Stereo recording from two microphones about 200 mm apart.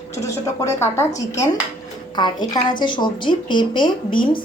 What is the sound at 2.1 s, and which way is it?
A woman's voice, 20° left (ahead or behind).